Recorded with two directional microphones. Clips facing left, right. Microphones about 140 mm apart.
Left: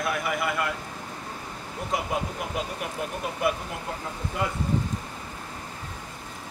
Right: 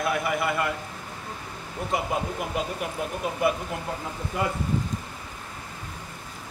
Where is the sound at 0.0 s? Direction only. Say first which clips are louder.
Right 2 dB; centre (ahead or behind).